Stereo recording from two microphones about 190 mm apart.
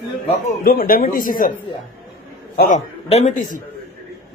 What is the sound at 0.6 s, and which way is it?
Speech, 50° left (ahead or behind).